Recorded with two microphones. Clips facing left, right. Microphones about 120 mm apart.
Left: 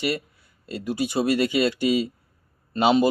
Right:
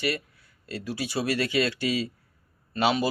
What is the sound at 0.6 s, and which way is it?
Speech, 20° left (ahead or behind).